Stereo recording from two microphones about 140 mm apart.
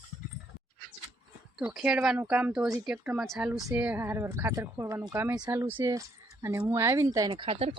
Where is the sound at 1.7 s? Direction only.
5° right (ahead or behind); by 7.3 s 25° right (ahead or behind).